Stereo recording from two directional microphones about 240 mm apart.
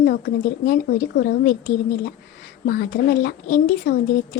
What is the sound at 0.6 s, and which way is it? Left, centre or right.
Speech, left.